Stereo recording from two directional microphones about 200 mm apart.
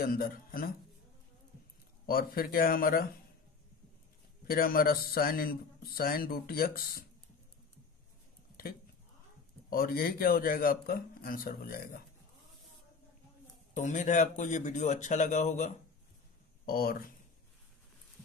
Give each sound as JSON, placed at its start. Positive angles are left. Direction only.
{"t": 0.0, "sound": "speech", "side_deg": 45}
{"t": 2.0, "sound": "speech", "side_deg": 45}
{"t": 4.5, "sound": "speech", "side_deg": 45}
{"t": 9.7, "sound": "speech", "side_deg": 45}
{"t": 13.7, "sound": "speech", "side_deg": 35}
{"t": 16.6, "sound": "speech", "side_deg": 50}